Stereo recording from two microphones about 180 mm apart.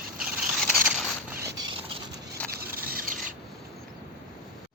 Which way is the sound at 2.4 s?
5° left (ahead or behind).